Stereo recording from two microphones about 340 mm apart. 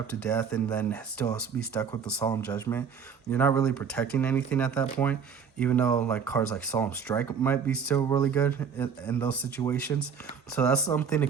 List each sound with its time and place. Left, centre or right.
0.2 s speech: centre